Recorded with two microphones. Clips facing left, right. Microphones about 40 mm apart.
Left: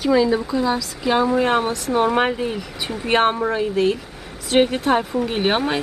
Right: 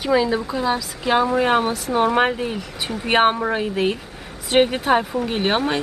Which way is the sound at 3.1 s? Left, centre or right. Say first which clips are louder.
Right 1 dB; centre.